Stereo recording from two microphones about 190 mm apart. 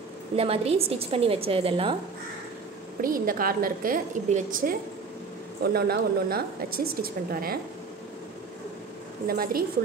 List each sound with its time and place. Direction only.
0.4 s a woman's voice: 30° right (ahead or behind)
3.0 s a woman's voice: 50° right (ahead or behind)
9.3 s a woman's voice: 50° right (ahead or behind)